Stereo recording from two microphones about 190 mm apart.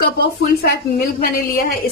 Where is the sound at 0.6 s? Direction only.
50° left (ahead or behind).